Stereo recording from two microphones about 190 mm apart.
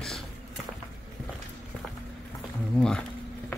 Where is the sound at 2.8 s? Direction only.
5° left (ahead or behind).